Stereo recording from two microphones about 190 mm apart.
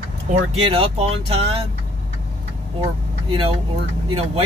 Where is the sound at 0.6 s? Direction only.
30° right (ahead or behind).